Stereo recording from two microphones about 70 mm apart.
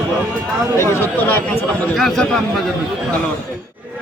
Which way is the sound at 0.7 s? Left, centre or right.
Left.